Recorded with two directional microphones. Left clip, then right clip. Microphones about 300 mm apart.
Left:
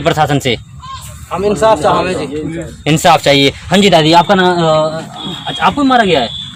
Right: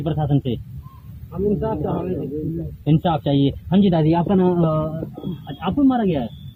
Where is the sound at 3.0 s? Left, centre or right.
Left.